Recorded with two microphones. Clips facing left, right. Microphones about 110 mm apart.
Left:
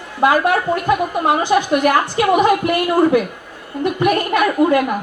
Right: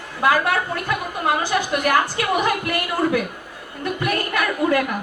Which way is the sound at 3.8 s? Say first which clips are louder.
Left 7 dB; 20° left (ahead or behind).